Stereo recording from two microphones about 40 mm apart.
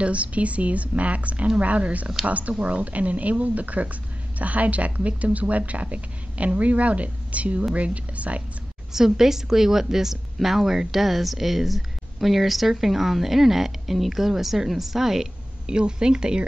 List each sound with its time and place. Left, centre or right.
0.0 s speech: right
8.9 s a woman's voice: centre
15.6 s speech: right